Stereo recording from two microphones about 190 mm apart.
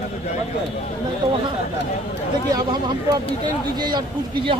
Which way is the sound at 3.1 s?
20° right (ahead or behind).